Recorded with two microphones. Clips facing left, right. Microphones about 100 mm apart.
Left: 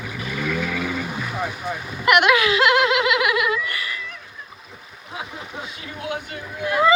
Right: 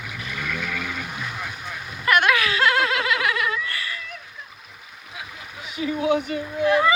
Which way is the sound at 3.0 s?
15° left (ahead or behind).